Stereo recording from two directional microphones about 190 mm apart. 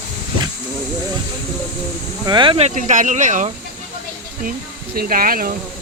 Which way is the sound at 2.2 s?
25° right (ahead or behind).